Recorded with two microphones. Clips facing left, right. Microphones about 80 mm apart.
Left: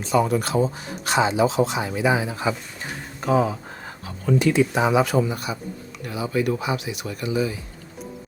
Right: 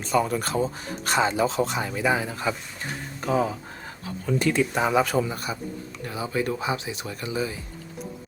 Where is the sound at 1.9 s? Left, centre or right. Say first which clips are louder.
Left 3 dB; left.